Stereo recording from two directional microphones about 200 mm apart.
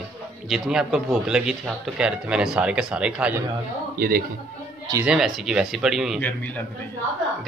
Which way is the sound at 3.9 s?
45° right (ahead or behind).